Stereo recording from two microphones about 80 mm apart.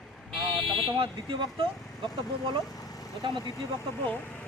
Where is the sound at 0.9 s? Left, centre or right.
Right.